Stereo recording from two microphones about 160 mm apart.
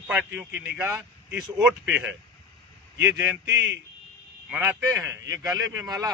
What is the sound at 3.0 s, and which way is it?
Speech, 90° right.